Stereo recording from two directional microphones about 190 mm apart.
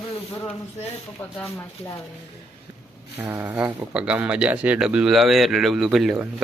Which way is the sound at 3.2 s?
10° right (ahead or behind).